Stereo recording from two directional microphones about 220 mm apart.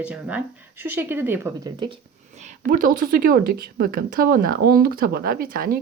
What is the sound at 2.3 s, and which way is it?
Speech, 35° right (ahead or behind).